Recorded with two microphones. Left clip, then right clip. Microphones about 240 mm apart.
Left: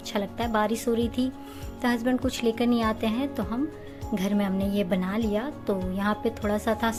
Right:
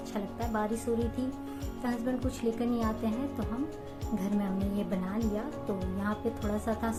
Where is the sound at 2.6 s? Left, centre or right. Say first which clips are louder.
Left 7 dB; left.